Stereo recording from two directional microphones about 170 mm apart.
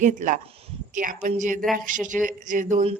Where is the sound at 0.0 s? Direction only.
50° right (ahead or behind).